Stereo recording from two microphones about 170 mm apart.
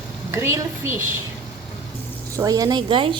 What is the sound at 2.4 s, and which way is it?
Speech, 20° right (ahead or behind).